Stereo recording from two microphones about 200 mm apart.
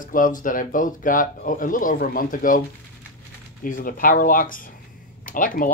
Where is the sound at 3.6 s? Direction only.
45° left (ahead or behind).